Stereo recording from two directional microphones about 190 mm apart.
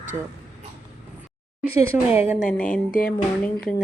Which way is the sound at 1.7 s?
10° right (ahead or behind).